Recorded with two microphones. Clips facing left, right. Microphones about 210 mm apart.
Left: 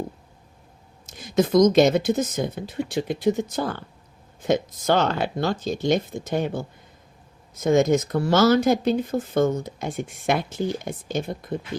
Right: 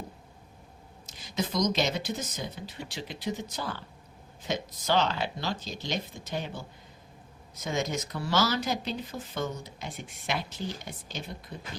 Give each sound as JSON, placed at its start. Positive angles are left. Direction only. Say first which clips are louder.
{"t": 1.0, "sound": "speech", "louder": "left 11 dB", "side_deg": 50}